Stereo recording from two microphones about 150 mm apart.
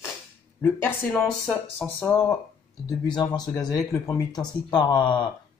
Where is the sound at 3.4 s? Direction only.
25° left (ahead or behind).